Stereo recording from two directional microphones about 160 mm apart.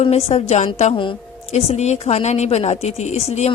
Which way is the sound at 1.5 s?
45° left (ahead or behind).